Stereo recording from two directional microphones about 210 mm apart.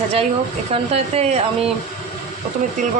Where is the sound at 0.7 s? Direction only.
30° right (ahead or behind).